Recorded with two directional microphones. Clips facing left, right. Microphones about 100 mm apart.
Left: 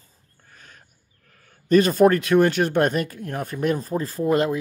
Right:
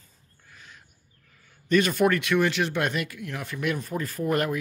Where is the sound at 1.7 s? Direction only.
35° left (ahead or behind).